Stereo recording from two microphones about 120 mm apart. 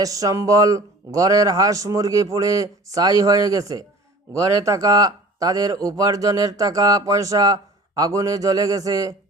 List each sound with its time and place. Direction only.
0.0 s speech: 30° right (ahead or behind)